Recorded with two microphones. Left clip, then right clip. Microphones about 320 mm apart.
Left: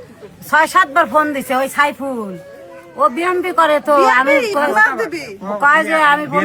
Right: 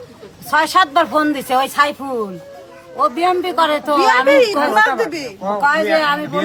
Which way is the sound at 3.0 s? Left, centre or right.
Centre.